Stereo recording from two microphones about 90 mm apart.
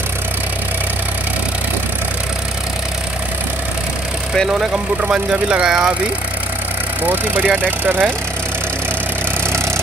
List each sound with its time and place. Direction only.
5.0 s speech: 10° right (ahead or behind)
7.1 s speech: 20° right (ahead or behind)